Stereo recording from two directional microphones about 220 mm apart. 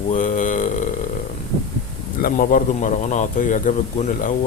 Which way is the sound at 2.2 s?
40° left (ahead or behind).